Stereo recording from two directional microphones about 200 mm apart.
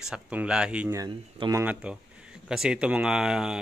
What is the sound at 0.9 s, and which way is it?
Speech, 20° right (ahead or behind).